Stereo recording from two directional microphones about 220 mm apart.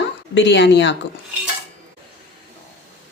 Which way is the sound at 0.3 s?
50° left (ahead or behind).